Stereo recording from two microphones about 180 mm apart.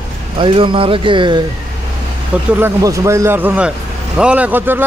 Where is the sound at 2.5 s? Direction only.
15° right (ahead or behind).